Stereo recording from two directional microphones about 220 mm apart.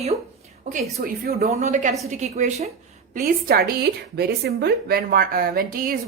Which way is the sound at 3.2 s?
45° right (ahead or behind).